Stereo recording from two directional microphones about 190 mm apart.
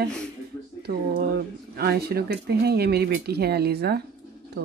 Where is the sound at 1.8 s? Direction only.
55° right (ahead or behind).